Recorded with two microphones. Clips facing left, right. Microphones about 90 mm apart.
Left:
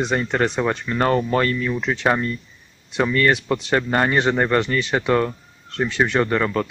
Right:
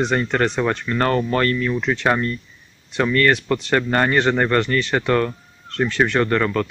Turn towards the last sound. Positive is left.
turn(degrees=15)  # may be behind; listen again after turning